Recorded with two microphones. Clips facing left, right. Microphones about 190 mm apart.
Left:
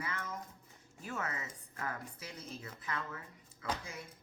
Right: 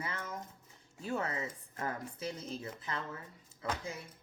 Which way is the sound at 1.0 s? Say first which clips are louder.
Right 5 dB; 30° right (ahead or behind).